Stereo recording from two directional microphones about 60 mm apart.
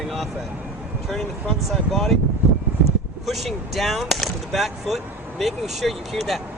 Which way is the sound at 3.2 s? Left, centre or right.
Centre.